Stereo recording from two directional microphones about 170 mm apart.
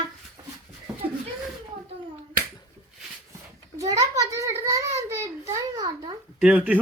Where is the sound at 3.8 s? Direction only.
20° right (ahead or behind).